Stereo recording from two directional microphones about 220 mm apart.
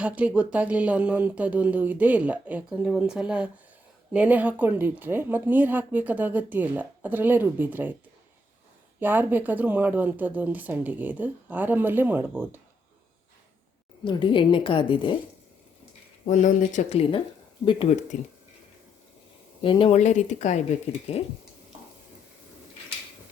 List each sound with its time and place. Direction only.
0.0 s speech: 5° right (ahead or behind)
9.0 s speech: 10° right (ahead or behind)
14.0 s a woman's voice: 20° left (ahead or behind)
16.2 s a woman's voice: 35° left (ahead or behind)
19.6 s a woman's voice: 25° left (ahead or behind)